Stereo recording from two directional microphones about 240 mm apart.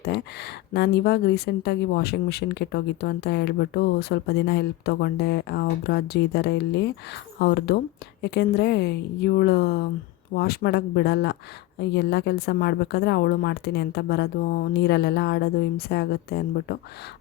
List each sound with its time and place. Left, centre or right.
0.0 s a woman's voice: left